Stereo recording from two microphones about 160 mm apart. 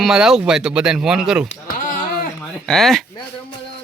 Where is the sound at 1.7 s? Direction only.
55° left (ahead or behind).